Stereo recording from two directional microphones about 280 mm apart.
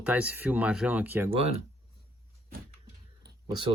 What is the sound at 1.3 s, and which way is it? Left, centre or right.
Speech, right.